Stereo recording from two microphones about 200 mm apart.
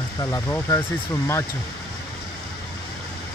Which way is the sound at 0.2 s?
15° left (ahead or behind).